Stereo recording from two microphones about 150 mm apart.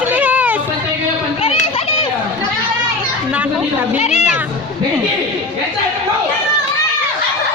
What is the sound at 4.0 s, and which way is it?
Children playing, 50° left (ahead or behind).